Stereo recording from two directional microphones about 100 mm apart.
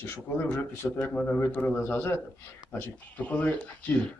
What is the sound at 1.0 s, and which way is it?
Speech, 10° left (ahead or behind).